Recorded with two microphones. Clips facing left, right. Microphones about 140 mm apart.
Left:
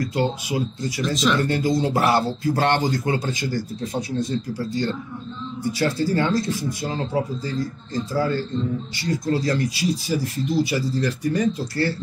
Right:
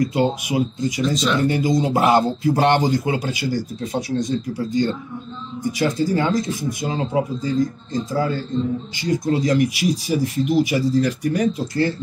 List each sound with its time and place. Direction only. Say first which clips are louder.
0.0 s speech: right 4 dB; 15° right (ahead or behind)